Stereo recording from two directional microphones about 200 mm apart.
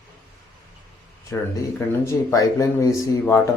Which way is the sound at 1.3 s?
10° left (ahead or behind).